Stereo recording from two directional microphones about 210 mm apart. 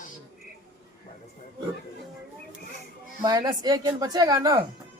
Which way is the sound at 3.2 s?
20° right (ahead or behind).